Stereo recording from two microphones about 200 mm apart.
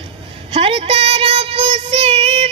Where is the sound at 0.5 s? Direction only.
30° right (ahead or behind).